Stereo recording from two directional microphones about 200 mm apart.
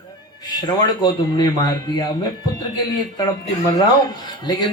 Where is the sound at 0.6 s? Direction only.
20° left (ahead or behind).